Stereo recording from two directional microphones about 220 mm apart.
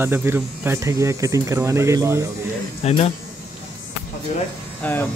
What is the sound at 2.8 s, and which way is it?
Speech, 25° left (ahead or behind).